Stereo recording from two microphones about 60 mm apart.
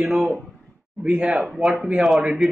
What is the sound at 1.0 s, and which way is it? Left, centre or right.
Speech, centre.